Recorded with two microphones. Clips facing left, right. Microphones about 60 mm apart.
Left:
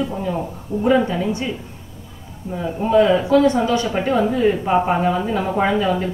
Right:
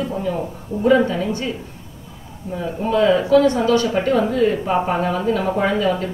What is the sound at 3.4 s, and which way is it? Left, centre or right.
Speech, left.